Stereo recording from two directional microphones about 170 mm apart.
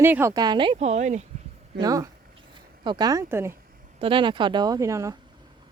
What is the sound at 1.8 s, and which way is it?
Speech, 20° right (ahead or behind).